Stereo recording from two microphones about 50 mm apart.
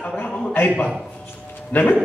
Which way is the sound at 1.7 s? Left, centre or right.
Left.